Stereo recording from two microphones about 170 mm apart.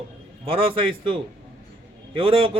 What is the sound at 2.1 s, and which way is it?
Speech, 30° right (ahead or behind).